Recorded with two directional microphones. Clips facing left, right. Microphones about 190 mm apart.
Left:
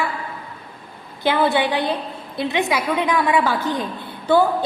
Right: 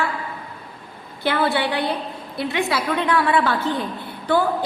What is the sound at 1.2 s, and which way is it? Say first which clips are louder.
A woman's voice: left 2 dB; 20° left (ahead or behind).